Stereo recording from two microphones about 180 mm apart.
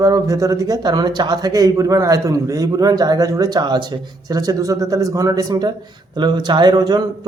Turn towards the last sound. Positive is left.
turn(degrees=-25)  # may be behind; listen again after turning